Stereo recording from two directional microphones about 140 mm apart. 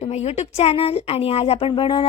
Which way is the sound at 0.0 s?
50° left (ahead or behind).